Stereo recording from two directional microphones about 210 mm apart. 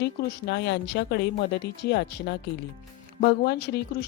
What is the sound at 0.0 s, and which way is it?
A woman's voice, 50° left (ahead or behind).